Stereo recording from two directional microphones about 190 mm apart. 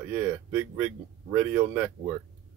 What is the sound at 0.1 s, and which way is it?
Speech, 10° right (ahead or behind).